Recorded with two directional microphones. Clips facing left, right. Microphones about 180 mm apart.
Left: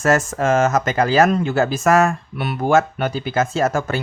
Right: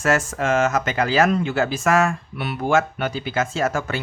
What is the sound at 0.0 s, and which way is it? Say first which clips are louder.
Speech: left 3 dB; 40° left (ahead or behind).